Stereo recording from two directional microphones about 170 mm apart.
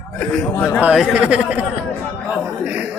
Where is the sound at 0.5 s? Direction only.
15° left (ahead or behind).